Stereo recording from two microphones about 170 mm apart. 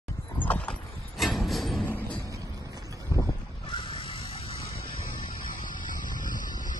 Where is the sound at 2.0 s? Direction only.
10° left (ahead or behind).